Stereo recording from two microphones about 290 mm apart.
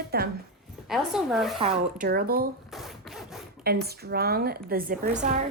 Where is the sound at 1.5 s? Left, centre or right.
Right.